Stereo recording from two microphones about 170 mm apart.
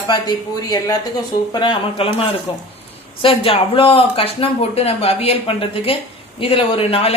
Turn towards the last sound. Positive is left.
turn(degrees=35)  # may be behind; listen again after turning